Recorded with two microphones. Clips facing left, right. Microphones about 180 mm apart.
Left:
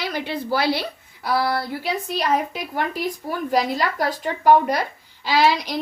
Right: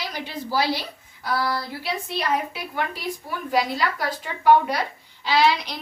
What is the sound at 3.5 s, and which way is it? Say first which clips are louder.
A woman's voice: left 1 dB; 45° left (ahead or behind).